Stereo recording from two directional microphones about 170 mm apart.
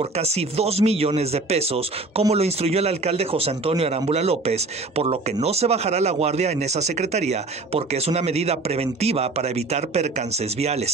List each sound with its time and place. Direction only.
0.0 s a man's voice: 40° right (ahead or behind)